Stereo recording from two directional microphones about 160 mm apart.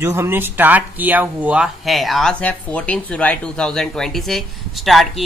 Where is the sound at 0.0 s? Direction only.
15° right (ahead or behind).